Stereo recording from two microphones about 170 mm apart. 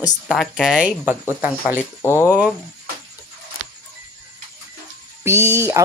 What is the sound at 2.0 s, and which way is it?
Speech, 15° left (ahead or behind).